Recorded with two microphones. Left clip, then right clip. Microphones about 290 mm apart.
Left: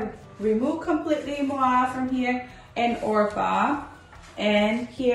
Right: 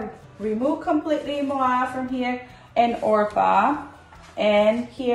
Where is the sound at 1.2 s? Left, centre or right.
Centre.